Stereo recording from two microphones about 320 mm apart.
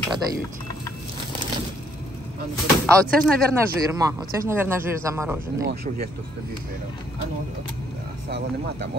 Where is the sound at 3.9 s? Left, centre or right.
Centre.